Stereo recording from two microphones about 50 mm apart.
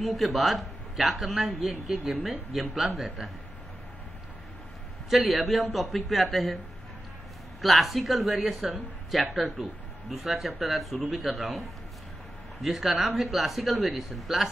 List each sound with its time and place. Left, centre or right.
0.0 s speech: centre
5.1 s speech: centre
7.6 s speech: centre